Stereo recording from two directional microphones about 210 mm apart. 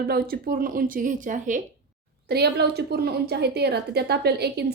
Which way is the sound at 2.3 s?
50° right (ahead or behind).